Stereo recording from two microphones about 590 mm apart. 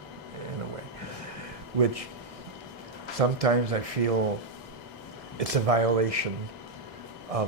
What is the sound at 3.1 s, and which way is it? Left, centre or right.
Speech, right.